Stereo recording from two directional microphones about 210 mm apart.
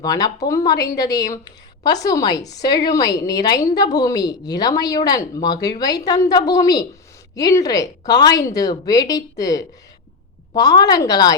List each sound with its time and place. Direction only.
0.0 s a woman's voice: 15° left (ahead or behind)